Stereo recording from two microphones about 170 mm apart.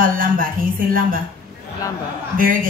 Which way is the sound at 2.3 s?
55° right (ahead or behind).